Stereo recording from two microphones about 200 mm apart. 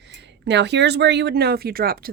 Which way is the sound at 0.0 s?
60° right (ahead or behind).